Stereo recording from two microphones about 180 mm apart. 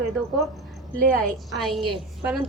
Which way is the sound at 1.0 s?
55° right (ahead or behind).